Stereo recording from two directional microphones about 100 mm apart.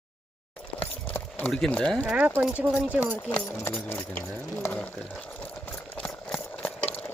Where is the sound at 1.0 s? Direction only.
20° left (ahead or behind).